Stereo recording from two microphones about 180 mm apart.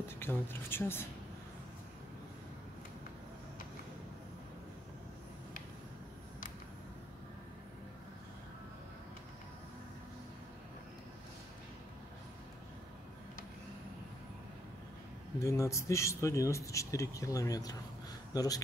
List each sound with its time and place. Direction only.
0.2 s speech: 10° left (ahead or behind)
15.3 s a man's voice: 15° left (ahead or behind)